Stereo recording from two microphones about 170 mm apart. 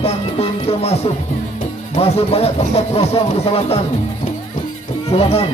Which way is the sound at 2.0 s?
35° left (ahead or behind).